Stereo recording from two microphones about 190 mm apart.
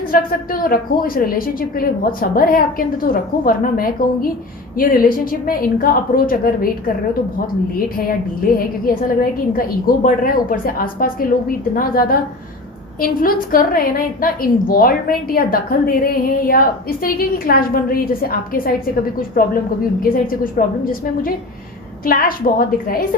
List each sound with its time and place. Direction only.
0.1 s a woman's voice: 50° left (ahead or behind)
9.5 s a woman's voice: 50° left (ahead or behind)